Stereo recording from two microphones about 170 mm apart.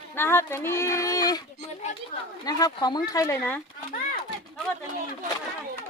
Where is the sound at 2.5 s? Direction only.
25° left (ahead or behind).